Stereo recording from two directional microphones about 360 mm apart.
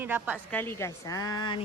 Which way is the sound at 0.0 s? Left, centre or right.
Centre.